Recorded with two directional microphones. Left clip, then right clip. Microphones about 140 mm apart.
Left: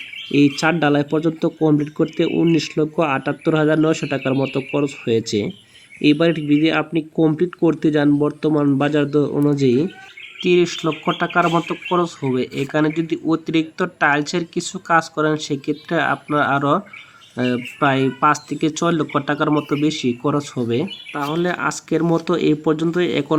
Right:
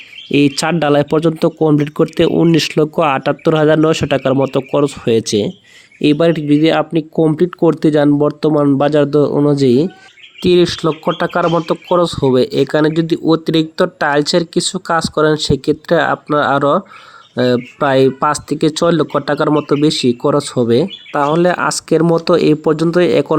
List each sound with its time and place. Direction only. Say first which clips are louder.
0.3 s speech: right 3 dB; 70° right (ahead or behind); by 23.4 s 45° right (ahead or behind)